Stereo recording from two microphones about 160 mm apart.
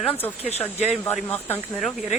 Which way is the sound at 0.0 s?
10° left (ahead or behind).